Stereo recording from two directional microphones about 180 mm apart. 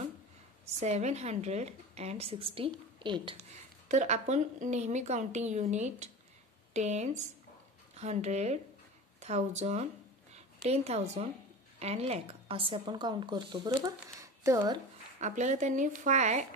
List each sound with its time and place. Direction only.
0.7 s a woman's voice: 40° right (ahead or behind)
3.9 s a woman's voice: 40° right (ahead or behind)
14.0 s speech: 15° right (ahead or behind)
15.1 s speech: 40° right (ahead or behind)